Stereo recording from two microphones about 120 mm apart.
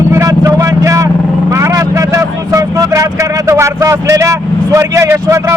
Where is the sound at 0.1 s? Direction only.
25° right (ahead or behind).